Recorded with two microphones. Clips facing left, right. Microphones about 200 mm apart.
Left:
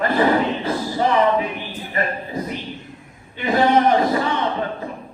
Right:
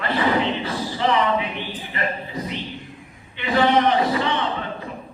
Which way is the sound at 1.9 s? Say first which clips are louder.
Left 4 dB; 50° left (ahead or behind).